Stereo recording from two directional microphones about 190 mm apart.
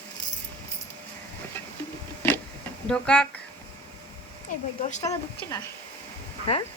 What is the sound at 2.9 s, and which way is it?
Speech, 5° left (ahead or behind).